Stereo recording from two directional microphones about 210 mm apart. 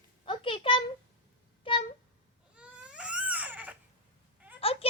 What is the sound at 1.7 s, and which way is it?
Cat, 25° left (ahead or behind).